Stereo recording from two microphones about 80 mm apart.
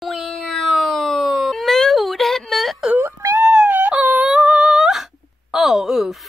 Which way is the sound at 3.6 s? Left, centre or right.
Centre.